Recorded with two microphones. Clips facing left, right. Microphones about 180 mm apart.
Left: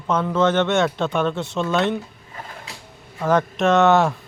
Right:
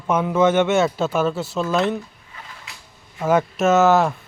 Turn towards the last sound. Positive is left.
turn(degrees=0)  # may be behind; listen again after turning